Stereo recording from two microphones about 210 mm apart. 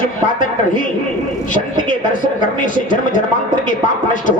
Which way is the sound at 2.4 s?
40° left (ahead or behind).